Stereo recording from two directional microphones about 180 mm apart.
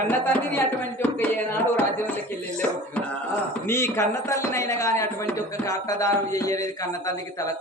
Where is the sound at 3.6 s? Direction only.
15° left (ahead or behind).